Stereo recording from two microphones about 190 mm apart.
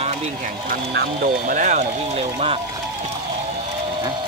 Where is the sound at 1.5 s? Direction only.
40° right (ahead or behind).